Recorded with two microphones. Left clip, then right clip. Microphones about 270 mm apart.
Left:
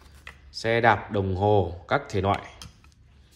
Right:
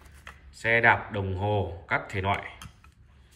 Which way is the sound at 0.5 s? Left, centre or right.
Centre.